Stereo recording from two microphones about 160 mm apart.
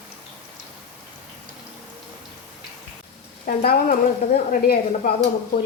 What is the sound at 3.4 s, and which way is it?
A woman's voice, 65° left (ahead or behind).